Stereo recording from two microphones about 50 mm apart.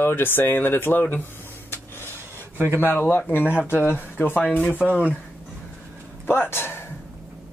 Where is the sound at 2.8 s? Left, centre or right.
Left.